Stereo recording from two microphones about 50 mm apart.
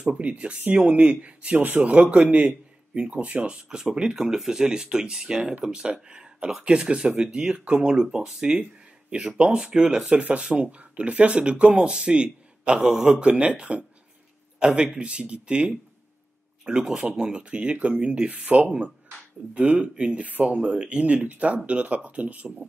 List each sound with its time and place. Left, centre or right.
0.2 s speech: right
3.5 s speech: centre
6.0 s a sound: centre
6.6 s speech: centre
8.0 s speech: centre
9.4 s speech: centre
16.7 s speech: centre; by 22.7 s right